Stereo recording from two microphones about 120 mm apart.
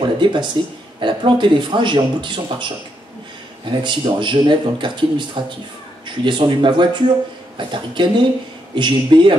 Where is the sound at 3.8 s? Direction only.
40° right (ahead or behind).